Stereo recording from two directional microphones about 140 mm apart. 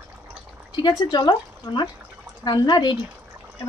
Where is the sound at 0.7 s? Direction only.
30° left (ahead or behind).